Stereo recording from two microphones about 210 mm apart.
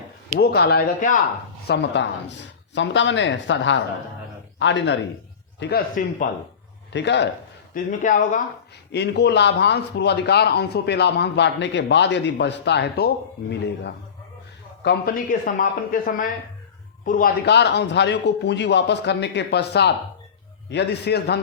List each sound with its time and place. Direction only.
0.3 s a man's voice: 50° left (ahead or behind)
1.6 s speech: 55° left (ahead or behind)
5.5 s a man's voice: 50° left (ahead or behind)
6.9 s speech: 55° left (ahead or behind)
7.7 s speech: 35° left (ahead or behind)
8.9 s a man's voice: 55° left (ahead or behind)